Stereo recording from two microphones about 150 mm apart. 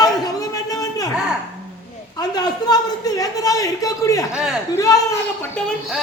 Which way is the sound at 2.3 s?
25° left (ahead or behind).